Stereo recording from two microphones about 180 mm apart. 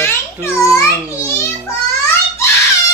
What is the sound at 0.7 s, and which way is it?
Speech, 15° left (ahead or behind).